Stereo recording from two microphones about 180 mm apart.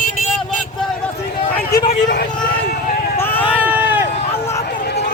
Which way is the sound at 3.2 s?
10° left (ahead or behind).